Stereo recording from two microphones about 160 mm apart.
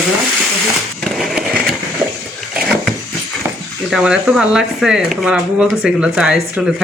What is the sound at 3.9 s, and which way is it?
Speech, 5° right (ahead or behind).